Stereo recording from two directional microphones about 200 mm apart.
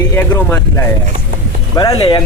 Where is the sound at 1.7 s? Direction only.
20° left (ahead or behind).